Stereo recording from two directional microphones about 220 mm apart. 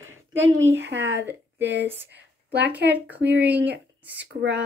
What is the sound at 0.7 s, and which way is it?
Speech, 50° right (ahead or behind).